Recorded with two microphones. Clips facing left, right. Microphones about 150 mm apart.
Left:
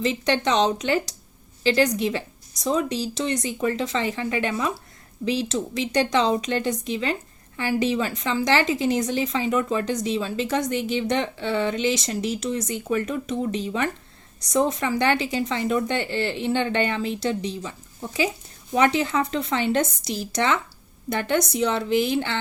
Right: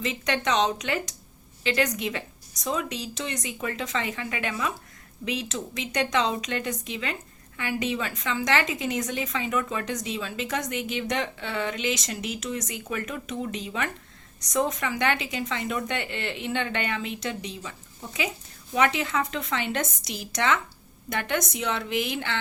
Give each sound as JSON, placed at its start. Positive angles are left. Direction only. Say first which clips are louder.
{"t": 0.0, "sound": "speech", "louder": "left 5 dB", "side_deg": 30}